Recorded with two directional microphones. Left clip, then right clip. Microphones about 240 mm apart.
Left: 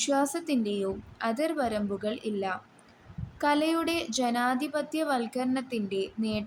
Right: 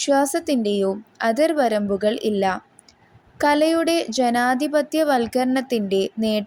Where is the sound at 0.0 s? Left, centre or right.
Right.